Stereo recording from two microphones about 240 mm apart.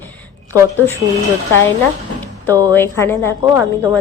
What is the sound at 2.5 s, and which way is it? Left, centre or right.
Speech, centre.